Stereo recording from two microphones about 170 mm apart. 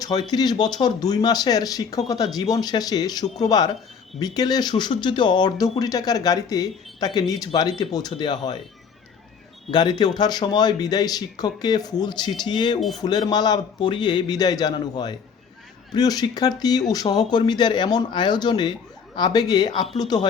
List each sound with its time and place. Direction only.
0.0 s speech: 25° left (ahead or behind)
9.7 s speech: 25° left (ahead or behind)